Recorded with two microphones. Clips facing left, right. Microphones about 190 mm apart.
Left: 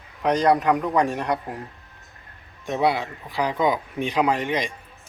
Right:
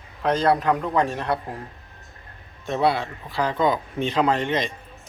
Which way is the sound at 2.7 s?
15° left (ahead or behind).